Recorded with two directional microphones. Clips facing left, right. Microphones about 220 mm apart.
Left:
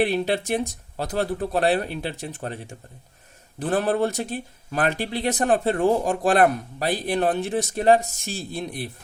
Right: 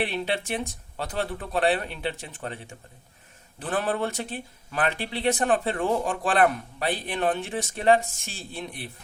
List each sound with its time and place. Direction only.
0.0 s speech: 40° left (ahead or behind)
3.6 s speech: 40° left (ahead or behind)